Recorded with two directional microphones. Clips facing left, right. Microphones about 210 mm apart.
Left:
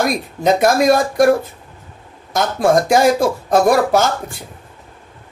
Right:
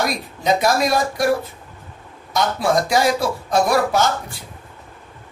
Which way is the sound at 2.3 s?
50° left (ahead or behind).